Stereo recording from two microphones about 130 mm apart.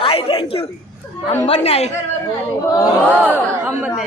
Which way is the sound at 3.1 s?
15° right (ahead or behind).